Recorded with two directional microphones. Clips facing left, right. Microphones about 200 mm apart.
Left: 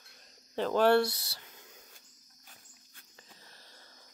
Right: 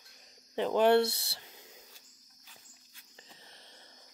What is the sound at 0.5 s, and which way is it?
Speech, 20° right (ahead or behind).